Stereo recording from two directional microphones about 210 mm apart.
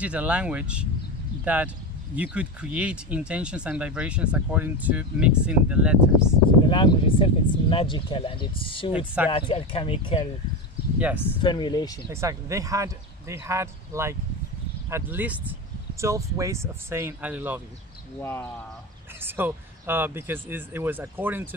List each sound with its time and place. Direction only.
0.0 s speech: 5° right (ahead or behind)
6.7 s speech: 25° left (ahead or behind)
8.9 s speech: 5° right (ahead or behind)
9.3 s speech: 25° left (ahead or behind)
11.4 s speech: 20° left (ahead or behind)
12.1 s speech: 15° right (ahead or behind)
18.2 s speech: 10° left (ahead or behind)
19.2 s speech: 10° right (ahead or behind)